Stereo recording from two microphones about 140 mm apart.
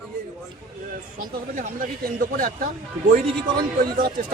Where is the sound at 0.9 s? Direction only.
75° right (ahead or behind).